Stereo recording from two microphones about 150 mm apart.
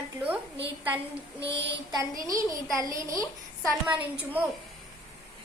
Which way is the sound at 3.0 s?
20° right (ahead or behind).